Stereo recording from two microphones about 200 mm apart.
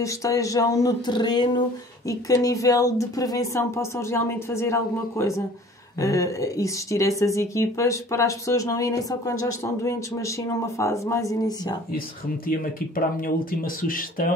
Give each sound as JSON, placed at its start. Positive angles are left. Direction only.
{"t": 0.0, "sound": "speech", "side_deg": 15}
{"t": 12.4, "sound": "speech", "side_deg": 45}